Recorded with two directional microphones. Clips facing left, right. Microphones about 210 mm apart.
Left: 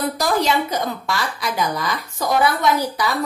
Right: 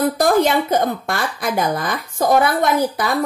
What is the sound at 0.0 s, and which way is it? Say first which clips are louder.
A woman's voice: right 5 dB; 50° right (ahead or behind).